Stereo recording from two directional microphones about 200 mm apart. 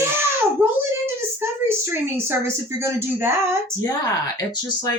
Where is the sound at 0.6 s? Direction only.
10° right (ahead or behind).